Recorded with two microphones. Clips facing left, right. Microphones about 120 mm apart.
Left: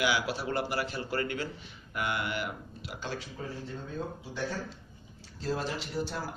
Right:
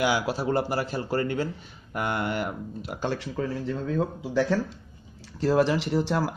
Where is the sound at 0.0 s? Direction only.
40° right (ahead or behind).